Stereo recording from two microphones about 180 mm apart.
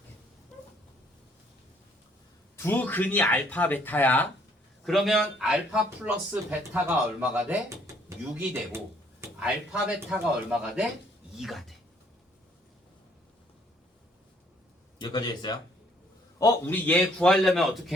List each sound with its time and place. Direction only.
2.6 s a man's voice: 10° left (ahead or behind); by 7.6 s 5° right (ahead or behind)
9.2 s a man's voice: 5° right (ahead or behind)
14.9 s speech: 25° left (ahead or behind)
16.4 s a man's voice: 10° left (ahead or behind)